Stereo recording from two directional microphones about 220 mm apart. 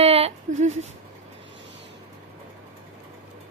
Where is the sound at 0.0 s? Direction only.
25° right (ahead or behind).